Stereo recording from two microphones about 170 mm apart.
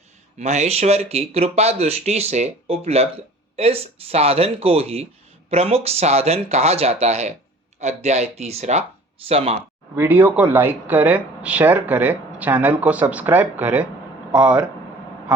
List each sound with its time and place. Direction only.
0.3 s speech: 40° right (ahead or behind)
9.9 s speech: 10° right (ahead or behind)